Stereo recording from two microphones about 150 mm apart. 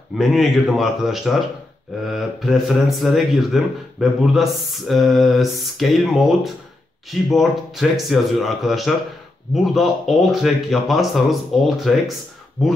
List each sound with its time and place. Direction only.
0.2 s speech: centre (ahead or behind)